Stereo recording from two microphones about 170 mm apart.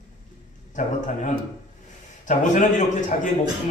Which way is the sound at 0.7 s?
45° left (ahead or behind).